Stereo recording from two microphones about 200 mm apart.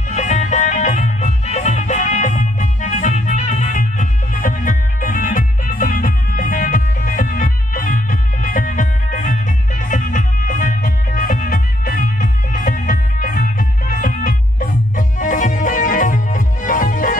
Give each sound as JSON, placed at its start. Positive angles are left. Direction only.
{"t": 0.1, "sound": "music", "side_deg": 35}